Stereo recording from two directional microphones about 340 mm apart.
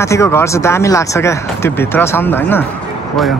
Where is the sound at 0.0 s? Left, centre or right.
Centre.